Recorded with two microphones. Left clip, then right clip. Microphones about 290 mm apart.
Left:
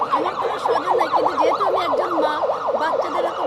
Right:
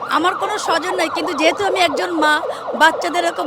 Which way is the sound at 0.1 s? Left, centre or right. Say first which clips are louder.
Right 3 dB; right.